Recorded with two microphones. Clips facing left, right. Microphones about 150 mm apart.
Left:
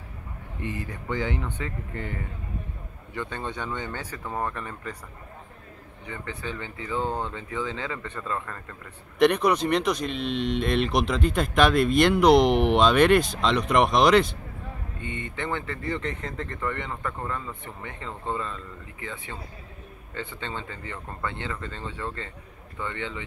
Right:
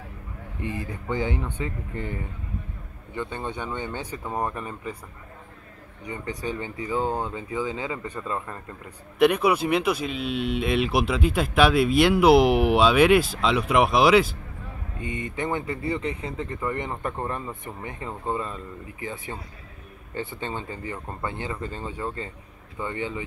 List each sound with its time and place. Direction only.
1.0 s speech: 15° right (ahead or behind)
3.2 s speech: 15° right (ahead or behind)
6.0 s speech: 15° right (ahead or behind)
15.3 s speech: 15° right (ahead or behind)
20.3 s speech: 15° right (ahead or behind)